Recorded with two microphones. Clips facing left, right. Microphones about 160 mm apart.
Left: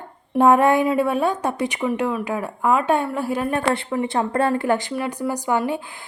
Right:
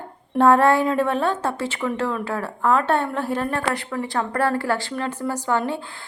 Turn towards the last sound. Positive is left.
turn(degrees=15)  # may be behind; listen again after turning